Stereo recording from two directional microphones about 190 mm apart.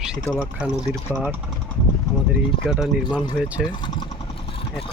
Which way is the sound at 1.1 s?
10° right (ahead or behind).